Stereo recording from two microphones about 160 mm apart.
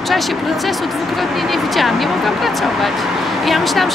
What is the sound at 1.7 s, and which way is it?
Speech, centre (ahead or behind).